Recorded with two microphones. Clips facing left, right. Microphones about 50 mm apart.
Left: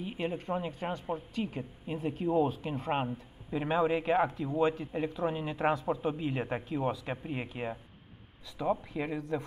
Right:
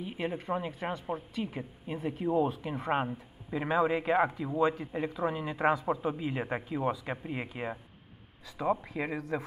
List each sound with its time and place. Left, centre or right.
0.0 s a woman's voice: centre
3.1 s speech: centre
3.7 s a woman's voice: centre
9.0 s a man's voice: right